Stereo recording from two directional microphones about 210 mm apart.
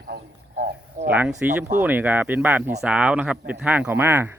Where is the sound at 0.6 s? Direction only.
50° right (ahead or behind).